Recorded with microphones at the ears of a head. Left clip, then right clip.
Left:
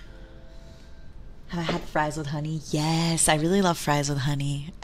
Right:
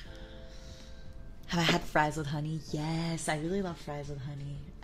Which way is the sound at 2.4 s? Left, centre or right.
Left.